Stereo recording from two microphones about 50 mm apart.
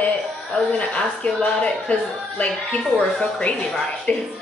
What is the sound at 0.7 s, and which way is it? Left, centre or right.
A woman's voice, left.